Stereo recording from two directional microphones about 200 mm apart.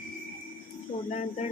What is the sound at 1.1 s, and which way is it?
Speech, 35° left (ahead or behind).